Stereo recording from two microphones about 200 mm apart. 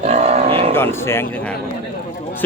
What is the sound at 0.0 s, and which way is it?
Cattle, 35° right (ahead or behind).